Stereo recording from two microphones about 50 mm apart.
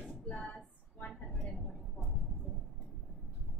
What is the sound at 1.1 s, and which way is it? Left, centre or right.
Vehicle, centre.